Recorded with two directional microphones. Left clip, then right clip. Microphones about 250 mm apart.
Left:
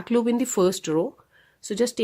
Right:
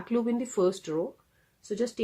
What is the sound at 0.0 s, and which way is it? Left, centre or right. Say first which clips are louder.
Speech: left 7 dB; left.